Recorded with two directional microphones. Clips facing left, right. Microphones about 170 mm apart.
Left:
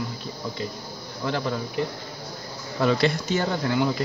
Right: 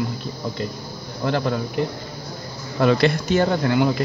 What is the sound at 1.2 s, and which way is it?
Speech, 60° right (ahead or behind).